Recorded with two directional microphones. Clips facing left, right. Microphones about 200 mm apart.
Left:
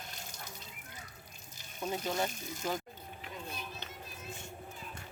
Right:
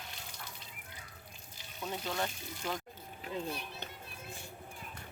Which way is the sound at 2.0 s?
20° left (ahead or behind).